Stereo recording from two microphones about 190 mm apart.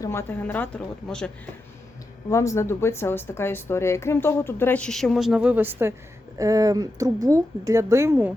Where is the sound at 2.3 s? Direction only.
15° left (ahead or behind); by 8.3 s 10° right (ahead or behind).